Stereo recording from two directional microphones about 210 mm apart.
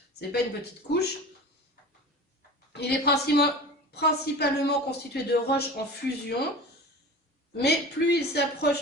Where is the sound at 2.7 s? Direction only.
50° left (ahead or behind).